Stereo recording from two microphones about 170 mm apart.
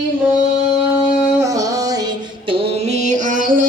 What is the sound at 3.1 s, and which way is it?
Music, 50° right (ahead or behind).